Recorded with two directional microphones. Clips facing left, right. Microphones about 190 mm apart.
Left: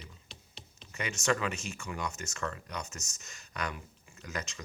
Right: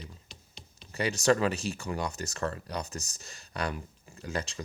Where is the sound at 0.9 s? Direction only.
35° right (ahead or behind).